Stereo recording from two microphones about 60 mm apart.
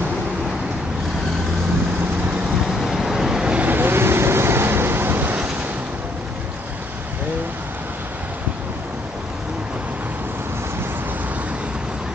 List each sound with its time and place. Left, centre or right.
2.7 s vehicle: centre
3.5 s vehicle: right